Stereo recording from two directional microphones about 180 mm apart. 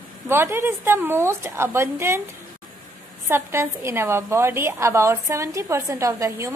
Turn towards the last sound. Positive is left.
turn(degrees=-20)  # may be behind; listen again after turning